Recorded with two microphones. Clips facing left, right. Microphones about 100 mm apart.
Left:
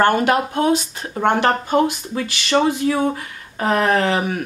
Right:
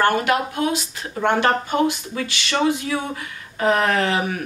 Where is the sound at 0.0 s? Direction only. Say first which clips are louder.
Left 3 dB; 35° left (ahead or behind).